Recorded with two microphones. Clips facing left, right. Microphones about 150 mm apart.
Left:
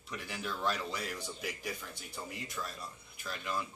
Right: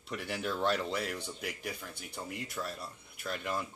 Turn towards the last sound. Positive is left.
turn(degrees=-60)  # may be behind; listen again after turning